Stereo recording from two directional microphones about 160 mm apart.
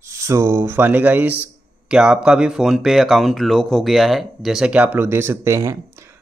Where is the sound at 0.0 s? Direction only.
15° right (ahead or behind).